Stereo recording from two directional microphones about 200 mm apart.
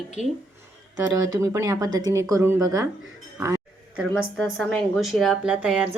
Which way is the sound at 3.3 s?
10° right (ahead or behind).